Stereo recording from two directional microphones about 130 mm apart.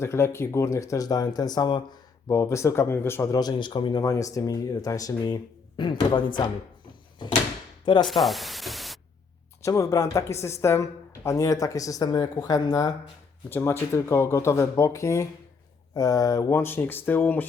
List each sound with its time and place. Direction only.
0.0 s speech: 20° left (ahead or behind)
3.3 s speech: 35° left (ahead or behind)
4.0 s speech: 25° left (ahead or behind)
8.0 s speech: centre (ahead or behind)
9.6 s speech: 25° left (ahead or behind)